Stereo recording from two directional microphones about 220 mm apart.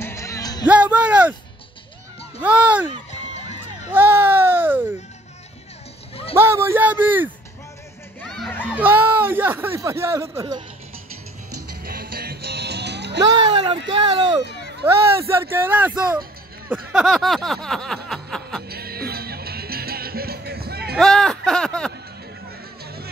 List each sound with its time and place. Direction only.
0.0 s music: 15° left (ahead or behind)
0.7 s music: 5° right (ahead or behind)
2.4 s speech: 5° right (ahead or behind)
3.9 s baby cry: 10° right (ahead or behind)
6.3 s speech: 10° right (ahead or behind)
8.2 s music: centre (ahead or behind)
8.6 s speech: 5° right (ahead or behind)
11.8 s music: 40° right (ahead or behind)
13.2 s speech: 20° right (ahead or behind)
16.7 s a sound: centre (ahead or behind)
18.7 s music: 45° right (ahead or behind)
20.9 s a sound: centre (ahead or behind)